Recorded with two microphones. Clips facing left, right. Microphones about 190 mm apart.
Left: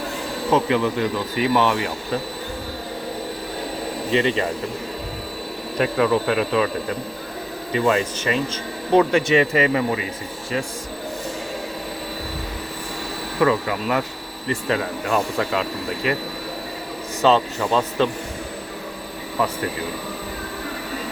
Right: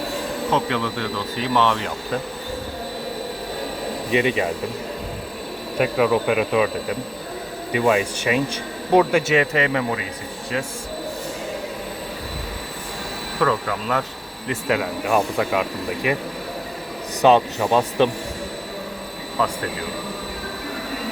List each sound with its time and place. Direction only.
0.5 s speech: 10° left (ahead or behind)
4.1 s speech: 10° right (ahead or behind)
5.7 s speech: 10° right (ahead or behind)
13.4 s speech: 10° left (ahead or behind)
14.4 s speech: 5° right (ahead or behind)
17.2 s speech: 15° right (ahead or behind)